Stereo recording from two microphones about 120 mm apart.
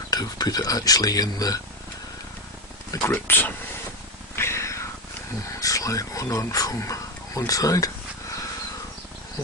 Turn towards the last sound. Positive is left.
turn(degrees=30)  # may be behind; listen again after turning